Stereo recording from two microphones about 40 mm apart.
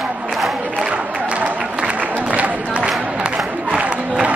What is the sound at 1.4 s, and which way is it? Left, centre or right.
Applause, right.